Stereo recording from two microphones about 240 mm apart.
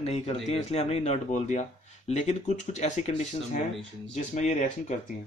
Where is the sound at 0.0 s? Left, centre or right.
Left.